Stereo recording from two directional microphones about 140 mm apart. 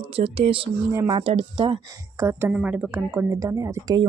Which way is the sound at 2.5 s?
10° right (ahead or behind).